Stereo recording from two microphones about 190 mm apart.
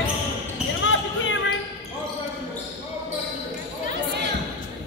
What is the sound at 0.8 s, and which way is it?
Basketball bounce, 80° left.